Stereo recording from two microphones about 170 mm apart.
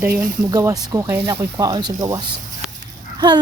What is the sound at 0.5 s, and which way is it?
Speech, 20° right (ahead or behind).